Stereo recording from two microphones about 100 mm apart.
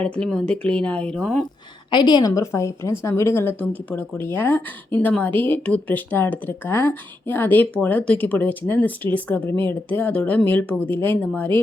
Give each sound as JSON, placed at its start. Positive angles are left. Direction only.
{"t": 0.0, "sound": "speech", "side_deg": 5}
{"t": 1.9, "sound": "a woman's voice", "side_deg": 45}